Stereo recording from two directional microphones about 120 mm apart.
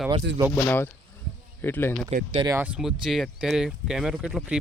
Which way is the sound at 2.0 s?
45° right (ahead or behind).